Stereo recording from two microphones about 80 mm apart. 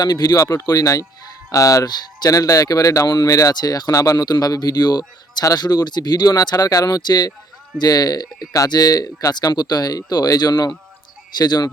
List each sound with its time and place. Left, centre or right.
0.0 s speech: left
3.5 s speech: left